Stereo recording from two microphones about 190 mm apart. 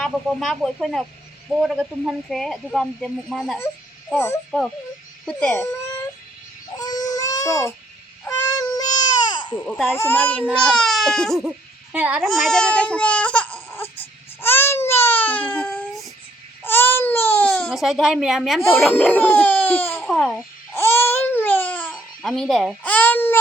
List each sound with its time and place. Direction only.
0.0 s speech: centre (ahead or behind)
6.7 s baby cry: 20° left (ahead or behind)
9.6 s a child's voice: centre (ahead or behind)
14.4 s baby cry: 10° left (ahead or behind)
17.7 s speech: centre (ahead or behind)
20.7 s babbling: 10° left (ahead or behind)